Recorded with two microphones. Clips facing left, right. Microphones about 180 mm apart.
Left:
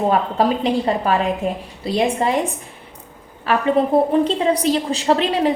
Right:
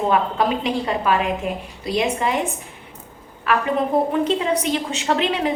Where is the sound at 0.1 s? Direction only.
35° left (ahead or behind).